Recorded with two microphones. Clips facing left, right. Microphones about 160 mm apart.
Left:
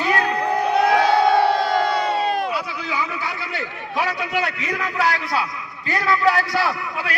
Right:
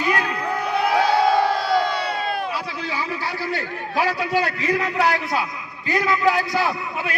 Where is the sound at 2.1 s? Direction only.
40° left (ahead or behind).